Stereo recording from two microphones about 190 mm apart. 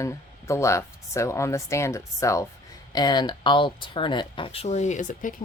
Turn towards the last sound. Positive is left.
turn(degrees=40)  # may be behind; listen again after turning